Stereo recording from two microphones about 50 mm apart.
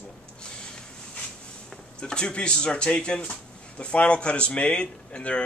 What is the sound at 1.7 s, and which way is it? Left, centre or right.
A man's voice, centre.